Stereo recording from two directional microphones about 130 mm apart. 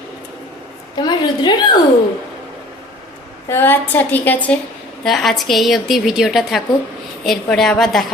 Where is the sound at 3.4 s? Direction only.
15° left (ahead or behind).